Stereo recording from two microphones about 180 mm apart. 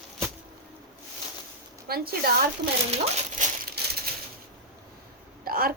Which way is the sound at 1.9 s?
60° right (ahead or behind).